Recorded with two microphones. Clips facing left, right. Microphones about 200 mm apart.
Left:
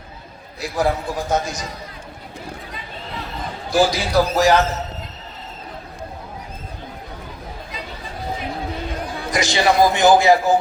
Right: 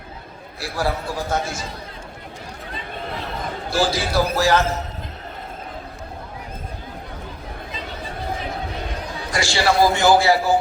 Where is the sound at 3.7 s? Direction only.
15° left (ahead or behind).